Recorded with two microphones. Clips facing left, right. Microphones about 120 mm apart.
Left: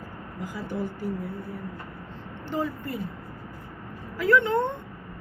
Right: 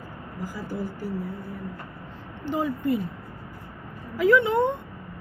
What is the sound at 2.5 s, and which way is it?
Speech, 15° right (ahead or behind).